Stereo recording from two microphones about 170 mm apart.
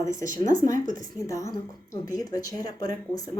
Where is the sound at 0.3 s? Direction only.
50° right (ahead or behind).